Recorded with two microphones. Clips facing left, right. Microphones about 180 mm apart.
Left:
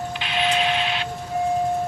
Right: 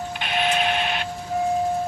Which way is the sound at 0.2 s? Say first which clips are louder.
Even; 50° right (ahead or behind).